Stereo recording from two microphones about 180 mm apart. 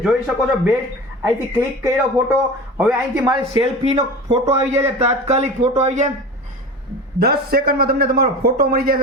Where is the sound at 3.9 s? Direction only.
35° right (ahead or behind).